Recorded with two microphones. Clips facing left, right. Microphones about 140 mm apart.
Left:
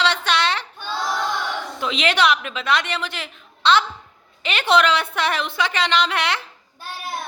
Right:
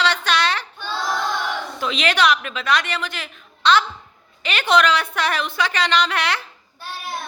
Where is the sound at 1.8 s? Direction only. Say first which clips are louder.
Even; 20° left (ahead or behind).